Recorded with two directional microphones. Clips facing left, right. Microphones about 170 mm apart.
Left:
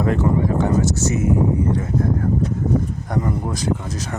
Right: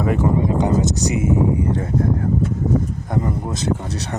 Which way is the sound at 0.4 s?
20° right (ahead or behind).